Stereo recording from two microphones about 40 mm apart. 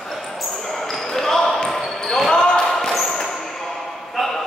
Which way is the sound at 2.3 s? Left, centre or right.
Left.